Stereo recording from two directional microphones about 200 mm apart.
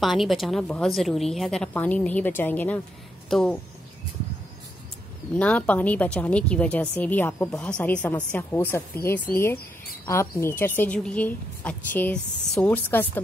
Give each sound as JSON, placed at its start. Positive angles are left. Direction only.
{"t": 0.0, "sound": "a woman's voice", "side_deg": 0}
{"t": 5.3, "sound": "speech", "side_deg": 5}